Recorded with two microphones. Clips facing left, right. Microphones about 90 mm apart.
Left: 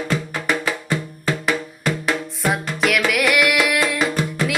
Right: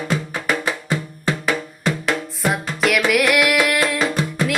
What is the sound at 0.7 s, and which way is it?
Music, 20° right (ahead or behind).